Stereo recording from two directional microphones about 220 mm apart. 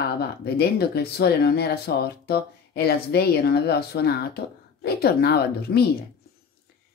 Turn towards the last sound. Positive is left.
turn(degrees=45)  # may be behind; listen again after turning